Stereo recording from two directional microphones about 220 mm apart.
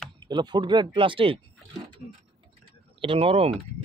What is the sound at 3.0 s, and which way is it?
Speech, 25° right (ahead or behind).